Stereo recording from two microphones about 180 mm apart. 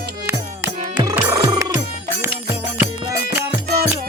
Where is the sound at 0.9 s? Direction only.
15° right (ahead or behind).